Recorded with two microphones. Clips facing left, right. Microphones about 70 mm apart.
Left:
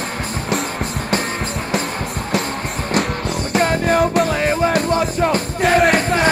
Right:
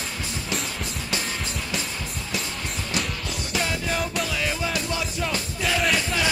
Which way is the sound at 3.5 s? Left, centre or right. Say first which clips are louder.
Left 11 dB; left.